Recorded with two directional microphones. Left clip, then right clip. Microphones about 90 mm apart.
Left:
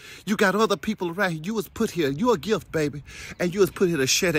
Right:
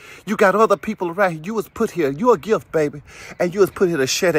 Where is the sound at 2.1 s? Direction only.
30° left (ahead or behind).